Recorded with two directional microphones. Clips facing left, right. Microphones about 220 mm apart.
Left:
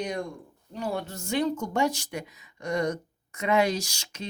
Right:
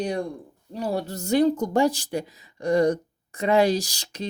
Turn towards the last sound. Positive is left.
turn(degrees=-35)  # may be behind; listen again after turning